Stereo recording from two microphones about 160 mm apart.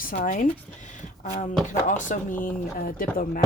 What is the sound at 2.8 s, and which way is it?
Speech, 60° left (ahead or behind).